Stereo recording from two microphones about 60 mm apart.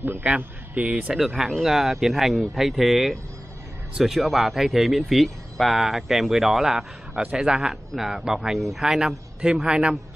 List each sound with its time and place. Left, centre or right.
0.0 s a man's voice: right
0.7 s speech: right
1.1 s a man's voice: centre